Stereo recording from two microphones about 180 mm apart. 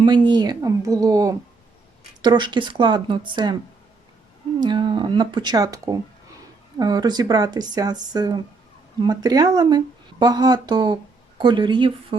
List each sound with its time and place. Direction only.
0.0 s speech: 25° right (ahead or behind)
4.6 s speech: 25° right (ahead or behind)